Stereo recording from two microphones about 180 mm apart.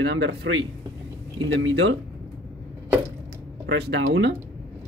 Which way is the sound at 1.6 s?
75° right (ahead or behind).